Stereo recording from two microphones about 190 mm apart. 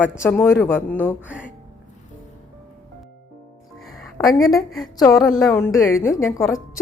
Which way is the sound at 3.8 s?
Centre (ahead or behind).